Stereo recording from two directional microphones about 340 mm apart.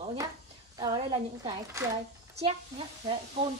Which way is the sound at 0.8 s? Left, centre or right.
Centre.